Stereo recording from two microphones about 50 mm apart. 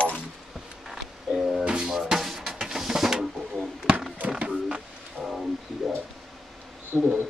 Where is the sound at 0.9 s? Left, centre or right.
Centre.